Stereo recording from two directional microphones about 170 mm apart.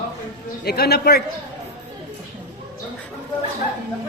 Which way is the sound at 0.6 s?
70° left (ahead or behind).